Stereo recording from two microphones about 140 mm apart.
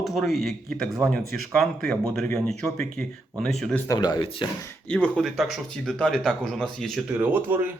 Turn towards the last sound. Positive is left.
turn(degrees=-15)  # may be behind; listen again after turning